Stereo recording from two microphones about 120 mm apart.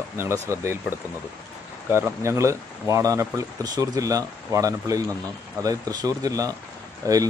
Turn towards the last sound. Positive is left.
turn(degrees=-30)  # may be behind; listen again after turning